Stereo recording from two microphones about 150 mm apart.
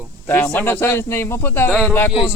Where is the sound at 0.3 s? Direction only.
15° left (ahead or behind).